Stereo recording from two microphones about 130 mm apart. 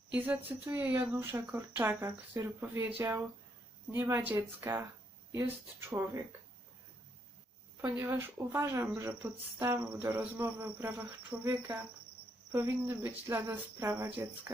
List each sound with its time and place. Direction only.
0.2 s cricket: 15° right (ahead or behind)
1.5 s speech: 15° right (ahead or behind)
3.9 s cricket: 20° right (ahead or behind)
6.0 s speech: 20° right (ahead or behind)
7.8 s speech: 20° right (ahead or behind)
9.0 s cricket: 20° right (ahead or behind)